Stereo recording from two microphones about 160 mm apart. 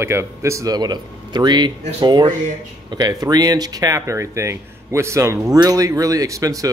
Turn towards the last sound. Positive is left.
turn(degrees=-20)  # may be behind; listen again after turning